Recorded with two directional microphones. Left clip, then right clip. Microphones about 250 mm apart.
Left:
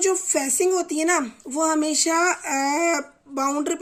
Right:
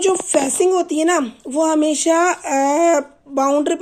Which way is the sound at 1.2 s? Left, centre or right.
Left.